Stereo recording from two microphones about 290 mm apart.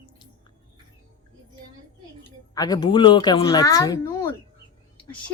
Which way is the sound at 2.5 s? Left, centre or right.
Centre.